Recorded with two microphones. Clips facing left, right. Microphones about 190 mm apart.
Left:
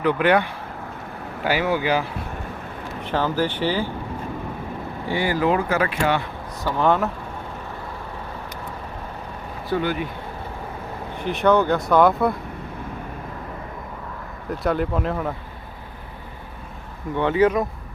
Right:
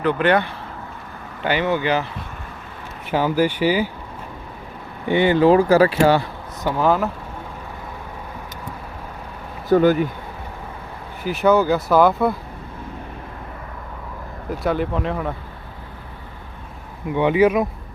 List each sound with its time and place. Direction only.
0.0 s speech: 10° left (ahead or behind)
3.1 s speech: 10° right (ahead or behind)
5.0 s speech: 20° right (ahead or behind)
6.7 s speech: centre (ahead or behind)
9.6 s speech: 45° right (ahead or behind)
11.2 s speech: 5° right (ahead or behind)
14.6 s speech: centre (ahead or behind)
17.2 s speech: 15° right (ahead or behind)